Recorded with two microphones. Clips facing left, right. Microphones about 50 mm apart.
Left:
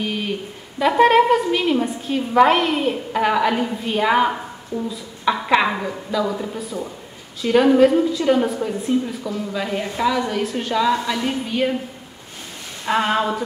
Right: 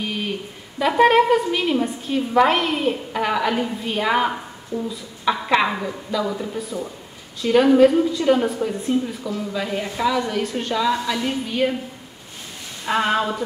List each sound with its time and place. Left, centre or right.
0.0 s a woman's voice: centre
12.8 s a woman's voice: centre